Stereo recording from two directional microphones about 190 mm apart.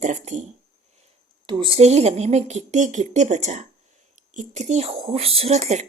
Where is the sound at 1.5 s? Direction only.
25° right (ahead or behind).